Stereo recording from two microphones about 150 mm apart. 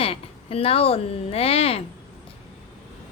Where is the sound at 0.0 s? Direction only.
40° left (ahead or behind).